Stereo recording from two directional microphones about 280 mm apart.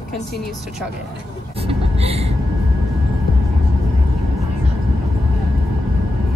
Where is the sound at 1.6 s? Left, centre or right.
Right.